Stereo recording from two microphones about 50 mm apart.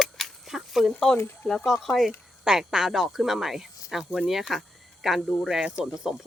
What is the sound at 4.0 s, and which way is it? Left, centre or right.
Speech, centre.